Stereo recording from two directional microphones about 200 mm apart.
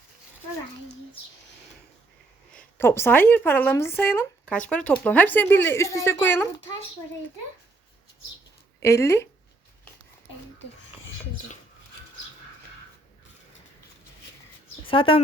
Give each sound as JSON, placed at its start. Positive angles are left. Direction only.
{"t": 2.6, "sound": "speech", "side_deg": 10}
{"t": 8.8, "sound": "speech", "side_deg": 15}
{"t": 14.8, "sound": "speech", "side_deg": 25}